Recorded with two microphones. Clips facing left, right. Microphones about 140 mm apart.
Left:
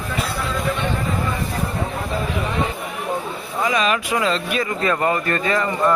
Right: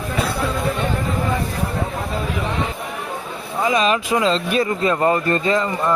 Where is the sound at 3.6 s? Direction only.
30° right (ahead or behind).